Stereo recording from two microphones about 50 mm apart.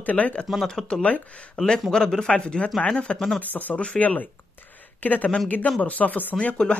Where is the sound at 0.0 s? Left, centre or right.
Left.